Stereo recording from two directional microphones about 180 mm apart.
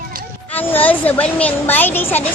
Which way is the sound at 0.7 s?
10° left (ahead or behind).